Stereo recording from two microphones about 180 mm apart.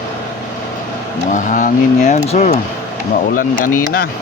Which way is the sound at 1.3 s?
45° left (ahead or behind).